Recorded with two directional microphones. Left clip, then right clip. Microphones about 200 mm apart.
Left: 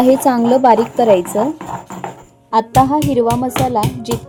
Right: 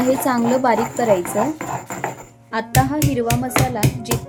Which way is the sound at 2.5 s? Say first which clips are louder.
Left 8 dB; 20° left (ahead or behind).